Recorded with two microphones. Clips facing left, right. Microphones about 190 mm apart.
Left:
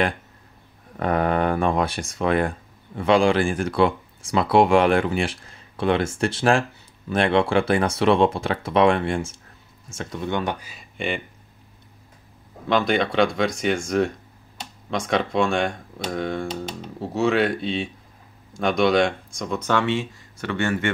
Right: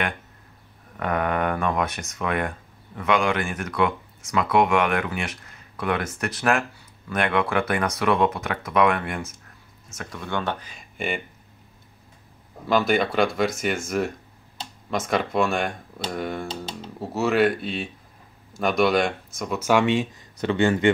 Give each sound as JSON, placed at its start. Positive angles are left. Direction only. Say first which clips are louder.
{"t": 0.9, "sound": "speech", "louder": "left 3 dB", "side_deg": 30}
{"t": 11.0, "sound": "speech", "louder": "left 2 dB", "side_deg": 0}
{"t": 12.6, "sound": "speech", "louder": "even", "side_deg": -5}
{"t": 16.4, "sound": "speech", "louder": "left 3 dB", "side_deg": -30}
{"t": 17.1, "sound": "speech", "louder": "even", "side_deg": -5}